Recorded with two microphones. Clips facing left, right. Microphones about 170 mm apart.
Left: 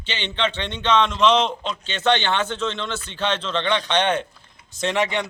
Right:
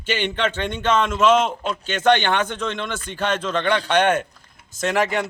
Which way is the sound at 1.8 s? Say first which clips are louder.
Right 3 dB; 50° right (ahead or behind).